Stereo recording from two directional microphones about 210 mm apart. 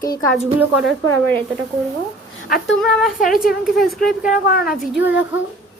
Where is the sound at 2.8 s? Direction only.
Centre (ahead or behind).